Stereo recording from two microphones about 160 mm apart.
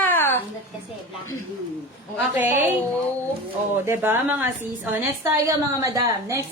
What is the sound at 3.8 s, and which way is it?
A woman's voice, 15° right (ahead or behind).